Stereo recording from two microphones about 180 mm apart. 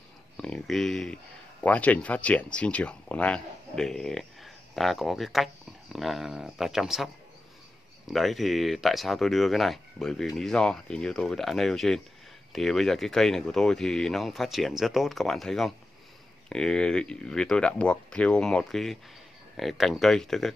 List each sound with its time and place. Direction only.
0.4 s speech: 5° left (ahead or behind)
8.1 s speech: centre (ahead or behind)